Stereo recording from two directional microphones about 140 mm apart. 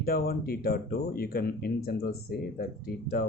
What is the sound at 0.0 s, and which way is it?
Speech, 90° left.